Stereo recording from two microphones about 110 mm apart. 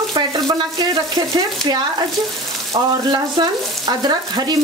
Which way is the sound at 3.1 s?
40° right (ahead or behind).